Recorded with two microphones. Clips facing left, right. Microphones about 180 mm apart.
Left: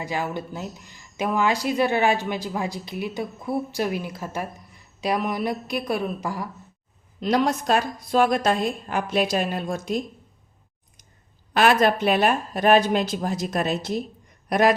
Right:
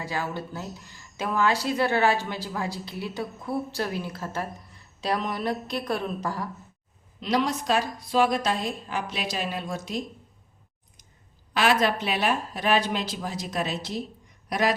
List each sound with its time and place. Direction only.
0.0 s speech: 15° left (ahead or behind)
7.2 s a woman's voice: 50° left (ahead or behind)
11.5 s a woman's voice: 50° left (ahead or behind)